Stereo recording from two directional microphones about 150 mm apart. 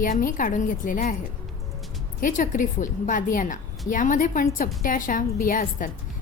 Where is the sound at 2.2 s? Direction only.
60° left (ahead or behind).